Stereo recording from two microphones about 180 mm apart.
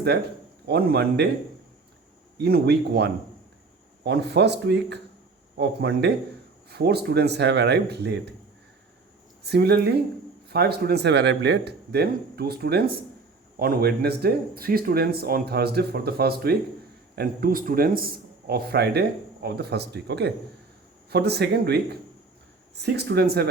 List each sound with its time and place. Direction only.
0.7 s speech: 60° right (ahead or behind)
2.4 s speech: 65° right (ahead or behind)
9.4 s speech: 65° right (ahead or behind)